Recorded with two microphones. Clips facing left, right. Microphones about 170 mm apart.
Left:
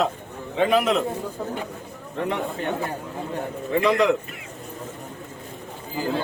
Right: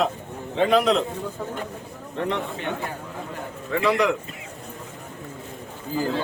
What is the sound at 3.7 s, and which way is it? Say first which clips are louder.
Speech: left 2 dB; 20° left (ahead or behind).